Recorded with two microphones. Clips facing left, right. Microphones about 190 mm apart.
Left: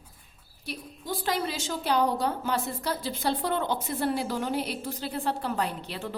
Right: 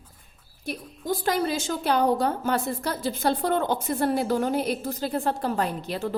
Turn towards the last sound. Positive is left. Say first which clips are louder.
# right 4 dB
turn(degrees=-45)  # may be behind; listen again after turning